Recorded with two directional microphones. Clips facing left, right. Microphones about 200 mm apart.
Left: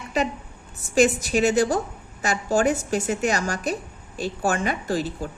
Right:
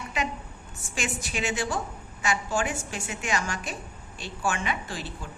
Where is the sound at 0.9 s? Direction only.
40° left (ahead or behind).